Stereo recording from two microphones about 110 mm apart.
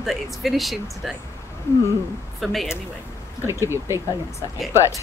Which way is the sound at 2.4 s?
Centre (ahead or behind).